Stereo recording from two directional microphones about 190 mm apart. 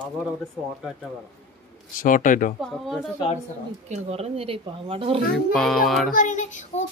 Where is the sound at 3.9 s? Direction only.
30° right (ahead or behind).